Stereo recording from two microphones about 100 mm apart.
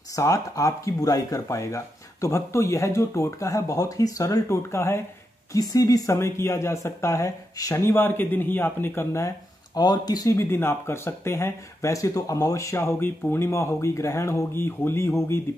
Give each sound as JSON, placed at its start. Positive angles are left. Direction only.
{"t": 0.1, "sound": "speech", "side_deg": 35}
{"t": 5.5, "sound": "speech", "side_deg": 40}
{"t": 6.1, "sound": "speech", "side_deg": 25}
{"t": 7.8, "sound": "speech", "side_deg": 20}
{"t": 9.8, "sound": "speech", "side_deg": 40}
{"t": 10.3, "sound": "speech", "side_deg": 25}